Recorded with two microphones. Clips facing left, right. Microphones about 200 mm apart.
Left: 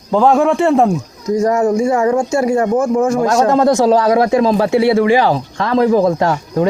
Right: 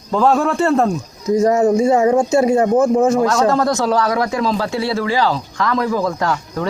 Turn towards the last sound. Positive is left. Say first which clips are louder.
# left 5 dB
turn(degrees=25)  # may be behind; listen again after turning